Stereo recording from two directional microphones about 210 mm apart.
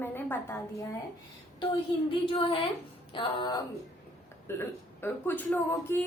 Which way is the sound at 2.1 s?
25° left (ahead or behind).